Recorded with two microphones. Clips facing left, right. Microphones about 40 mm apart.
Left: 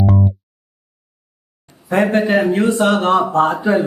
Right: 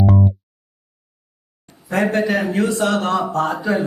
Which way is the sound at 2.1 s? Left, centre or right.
Left.